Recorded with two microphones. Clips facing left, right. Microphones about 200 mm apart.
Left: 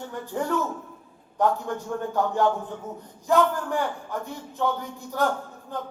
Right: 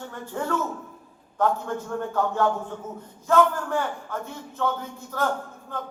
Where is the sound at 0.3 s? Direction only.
15° left (ahead or behind).